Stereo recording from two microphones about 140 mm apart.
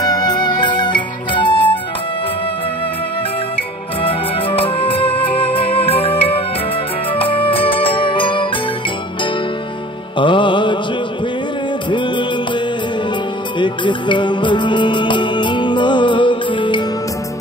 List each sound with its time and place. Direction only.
0.0 s music: 30° left (ahead or behind)
4.0 s music: 40° left (ahead or behind)
10.1 s music: 35° left (ahead or behind)
11.9 s music: 35° left (ahead or behind)